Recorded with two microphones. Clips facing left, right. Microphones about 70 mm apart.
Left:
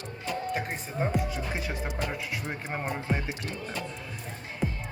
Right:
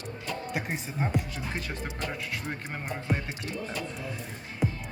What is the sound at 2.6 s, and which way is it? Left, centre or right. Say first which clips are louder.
Speech: left 4 dB; left.